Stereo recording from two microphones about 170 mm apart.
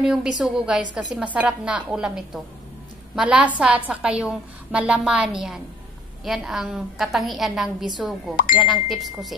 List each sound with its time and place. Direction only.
0.0 s a woman's voice: 5° right (ahead or behind)